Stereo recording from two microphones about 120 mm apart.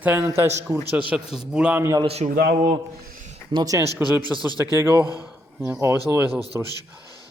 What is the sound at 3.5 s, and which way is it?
Speech, 30° right (ahead or behind).